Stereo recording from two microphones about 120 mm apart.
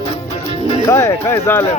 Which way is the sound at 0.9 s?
25° left (ahead or behind).